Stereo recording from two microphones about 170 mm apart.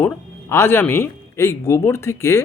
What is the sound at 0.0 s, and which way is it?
Speech, 15° left (ahead or behind).